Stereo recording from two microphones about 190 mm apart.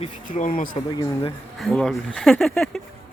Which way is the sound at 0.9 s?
20° left (ahead or behind).